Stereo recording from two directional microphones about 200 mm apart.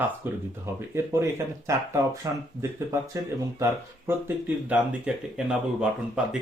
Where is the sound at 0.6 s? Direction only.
15° right (ahead or behind).